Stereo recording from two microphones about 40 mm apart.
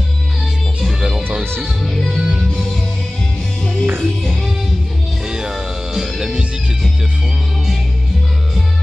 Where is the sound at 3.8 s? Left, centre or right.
Right.